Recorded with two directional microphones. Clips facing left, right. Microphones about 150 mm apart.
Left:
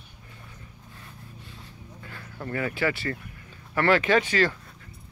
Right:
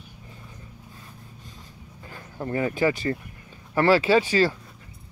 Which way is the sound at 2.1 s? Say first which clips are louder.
Right 4 dB; 20° right (ahead or behind).